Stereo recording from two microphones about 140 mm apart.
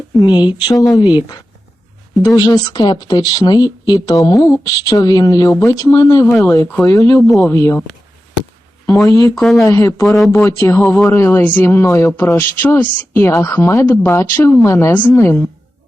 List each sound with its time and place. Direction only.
0.1 s speech: 30° left (ahead or behind)
9.3 s speech: centre (ahead or behind)
9.6 s speech: 20° left (ahead or behind)
10.1 s speech: centre (ahead or behind)
10.3 s speech: 20° left (ahead or behind)